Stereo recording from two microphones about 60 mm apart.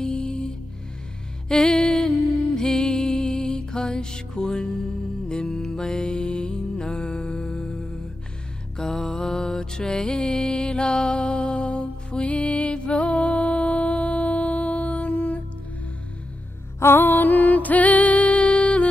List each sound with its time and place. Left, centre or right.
0.0 s music: centre
8.7 s mantra: centre
14.9 s music: left
16.8 s music: left